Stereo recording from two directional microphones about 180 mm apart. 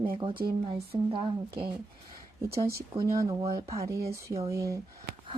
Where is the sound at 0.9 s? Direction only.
15° right (ahead or behind).